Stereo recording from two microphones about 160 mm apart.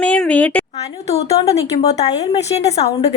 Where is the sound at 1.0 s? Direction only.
40° left (ahead or behind).